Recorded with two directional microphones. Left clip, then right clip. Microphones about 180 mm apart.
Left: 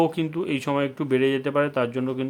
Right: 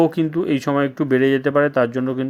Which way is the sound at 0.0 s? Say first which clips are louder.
Right 5 dB; 20° right (ahead or behind).